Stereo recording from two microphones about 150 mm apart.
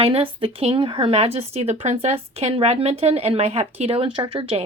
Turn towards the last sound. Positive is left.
turn(degrees=-40)  # may be behind; listen again after turning